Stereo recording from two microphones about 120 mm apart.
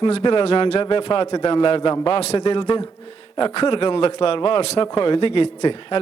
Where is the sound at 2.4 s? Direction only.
45° left (ahead or behind).